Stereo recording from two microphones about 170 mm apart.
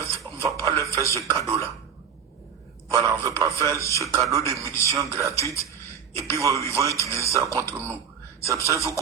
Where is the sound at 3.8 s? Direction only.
15° left (ahead or behind).